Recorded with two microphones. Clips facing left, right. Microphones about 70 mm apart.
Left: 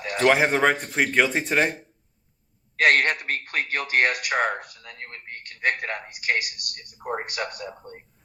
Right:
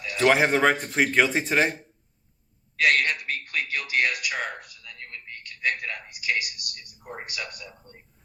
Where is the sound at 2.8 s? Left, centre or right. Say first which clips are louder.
Left 3 dB; left.